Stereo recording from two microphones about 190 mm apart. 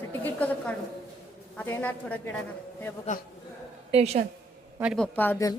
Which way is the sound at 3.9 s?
35° right (ahead or behind).